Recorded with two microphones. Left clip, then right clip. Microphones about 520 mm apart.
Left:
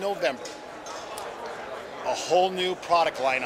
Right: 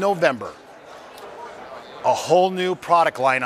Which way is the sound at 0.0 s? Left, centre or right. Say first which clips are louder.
Right 8 dB; right.